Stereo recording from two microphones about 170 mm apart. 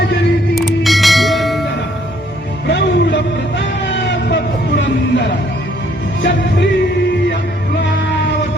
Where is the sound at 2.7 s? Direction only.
90° left.